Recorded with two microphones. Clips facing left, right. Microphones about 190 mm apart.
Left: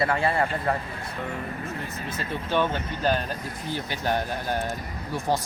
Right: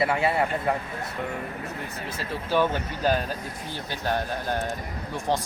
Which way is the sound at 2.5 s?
10° right (ahead or behind).